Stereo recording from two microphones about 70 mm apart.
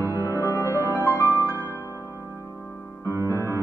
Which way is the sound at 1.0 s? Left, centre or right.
Left.